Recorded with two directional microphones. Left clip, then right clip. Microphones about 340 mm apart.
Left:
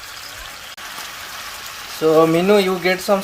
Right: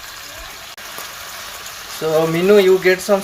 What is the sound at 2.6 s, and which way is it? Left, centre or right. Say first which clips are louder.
Speech: right 5 dB; left.